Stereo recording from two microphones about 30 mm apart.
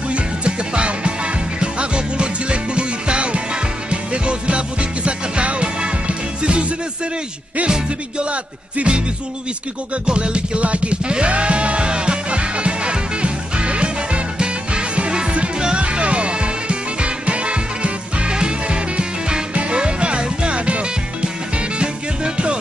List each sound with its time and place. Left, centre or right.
0.1 s music: right
10.0 s music: right
21.7 s music: right